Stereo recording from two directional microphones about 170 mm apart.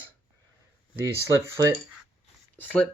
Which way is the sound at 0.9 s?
15° right (ahead or behind).